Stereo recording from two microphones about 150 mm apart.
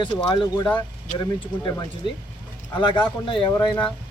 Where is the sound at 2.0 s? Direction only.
30° left (ahead or behind).